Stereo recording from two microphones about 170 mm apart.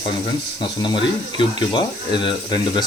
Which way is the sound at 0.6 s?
30° left (ahead or behind).